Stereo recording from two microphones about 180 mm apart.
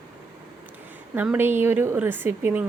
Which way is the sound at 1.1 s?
10° right (ahead or behind).